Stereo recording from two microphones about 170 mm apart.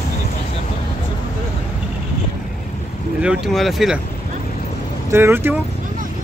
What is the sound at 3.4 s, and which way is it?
Speech, centre (ahead or behind).